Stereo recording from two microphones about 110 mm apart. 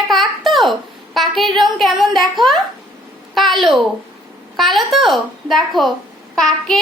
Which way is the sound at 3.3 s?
Centre (ahead or behind).